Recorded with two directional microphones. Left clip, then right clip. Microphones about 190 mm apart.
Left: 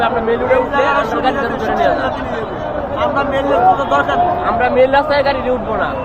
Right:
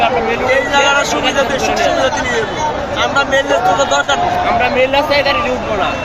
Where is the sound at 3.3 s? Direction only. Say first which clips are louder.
Left 2 dB; 35° right (ahead or behind).